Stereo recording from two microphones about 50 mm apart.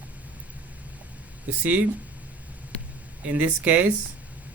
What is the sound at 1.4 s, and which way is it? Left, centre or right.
Speech, right.